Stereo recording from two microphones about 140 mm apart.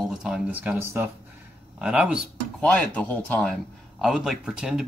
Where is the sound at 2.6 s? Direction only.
10° left (ahead or behind).